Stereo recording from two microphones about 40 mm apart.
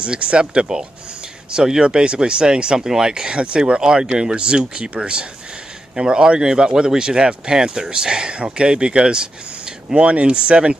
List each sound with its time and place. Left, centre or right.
0.0 s speech: right